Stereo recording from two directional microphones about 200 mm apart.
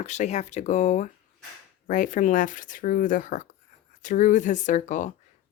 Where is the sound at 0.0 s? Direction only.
35° left (ahead or behind).